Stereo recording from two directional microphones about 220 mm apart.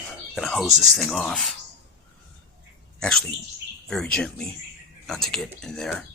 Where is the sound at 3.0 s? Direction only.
5° left (ahead or behind).